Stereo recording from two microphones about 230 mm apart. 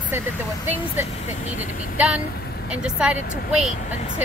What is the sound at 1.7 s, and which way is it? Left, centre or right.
Speech, left.